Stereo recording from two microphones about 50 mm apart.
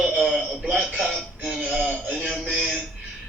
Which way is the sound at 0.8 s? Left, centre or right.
Right.